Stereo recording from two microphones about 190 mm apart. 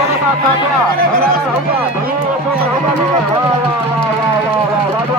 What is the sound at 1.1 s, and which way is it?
Speech, 50° right (ahead or behind).